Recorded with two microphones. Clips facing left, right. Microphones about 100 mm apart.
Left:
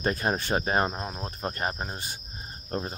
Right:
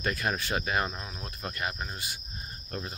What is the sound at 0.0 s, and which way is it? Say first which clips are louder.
Speech: left 4 dB; 30° left (ahead or behind).